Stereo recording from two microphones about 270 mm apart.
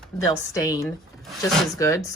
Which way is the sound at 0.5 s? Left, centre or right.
Centre.